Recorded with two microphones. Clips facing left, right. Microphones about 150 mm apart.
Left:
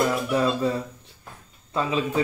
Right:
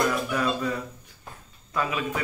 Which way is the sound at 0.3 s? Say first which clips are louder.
Left 4 dB; 25° left (ahead or behind).